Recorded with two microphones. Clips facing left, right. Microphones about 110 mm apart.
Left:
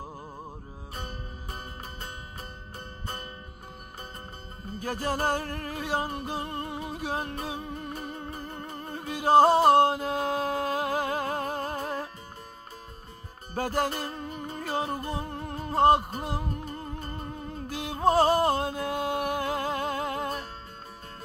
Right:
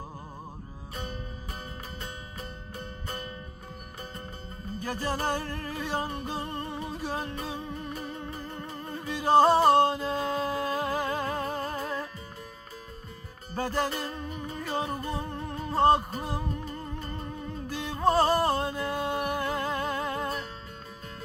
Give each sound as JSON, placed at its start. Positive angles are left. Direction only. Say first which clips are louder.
{"t": 0.9, "sound": "music", "louder": "right 2 dB", "side_deg": 45}
{"t": 4.8, "sound": "music", "louder": "left 2 dB", "side_deg": 50}
{"t": 13.5, "sound": "music", "louder": "left 1 dB", "side_deg": 50}